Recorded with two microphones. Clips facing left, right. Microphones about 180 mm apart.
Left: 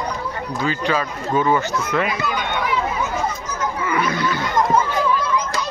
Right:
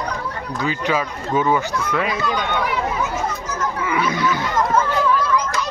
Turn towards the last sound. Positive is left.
turn(degrees=-10)  # may be behind; listen again after turning